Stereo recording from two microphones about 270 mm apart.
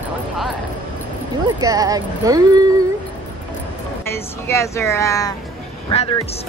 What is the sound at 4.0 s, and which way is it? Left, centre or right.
Speech, centre.